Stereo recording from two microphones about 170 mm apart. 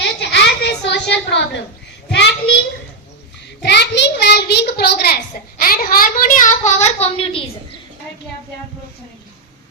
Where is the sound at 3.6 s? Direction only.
90° left; by 7.4 s 35° left (ahead or behind).